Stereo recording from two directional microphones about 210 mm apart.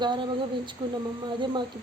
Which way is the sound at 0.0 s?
20° right (ahead or behind).